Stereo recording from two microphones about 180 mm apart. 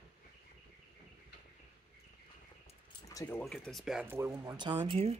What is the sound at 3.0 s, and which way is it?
Speech, 15° left (ahead or behind).